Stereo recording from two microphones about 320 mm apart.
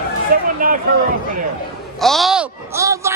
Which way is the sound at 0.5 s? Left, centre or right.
Right.